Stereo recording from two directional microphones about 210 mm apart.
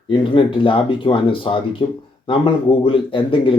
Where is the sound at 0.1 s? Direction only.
25° left (ahead or behind).